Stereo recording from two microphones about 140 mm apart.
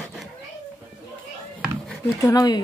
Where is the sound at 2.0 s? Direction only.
25° left (ahead or behind).